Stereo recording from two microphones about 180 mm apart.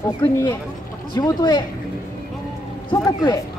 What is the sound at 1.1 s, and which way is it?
Speech, 20° left (ahead or behind).